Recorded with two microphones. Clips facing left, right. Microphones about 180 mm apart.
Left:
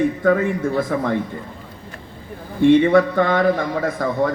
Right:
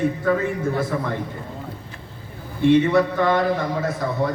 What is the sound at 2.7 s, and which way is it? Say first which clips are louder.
Speech: left 3 dB; 50° left (ahead or behind).